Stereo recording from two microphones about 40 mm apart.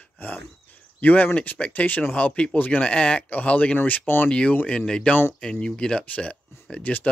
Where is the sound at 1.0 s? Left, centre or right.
Left.